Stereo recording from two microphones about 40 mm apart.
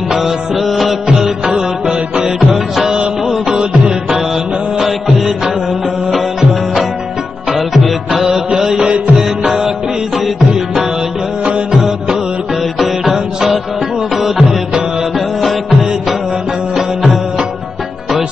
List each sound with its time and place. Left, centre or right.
0.1 s music: centre
1.0 s music: right
2.5 s music: centre
4.7 s music: centre
7.5 s music: centre
8.3 s music: centre
10.5 s music: centre
12.7 s music: centre
16.7 s music: centre